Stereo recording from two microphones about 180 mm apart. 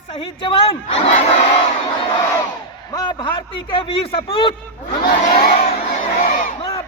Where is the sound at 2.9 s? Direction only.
25° left (ahead or behind).